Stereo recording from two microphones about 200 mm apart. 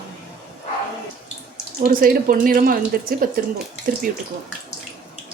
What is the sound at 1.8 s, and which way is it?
Speech, 45° right (ahead or behind).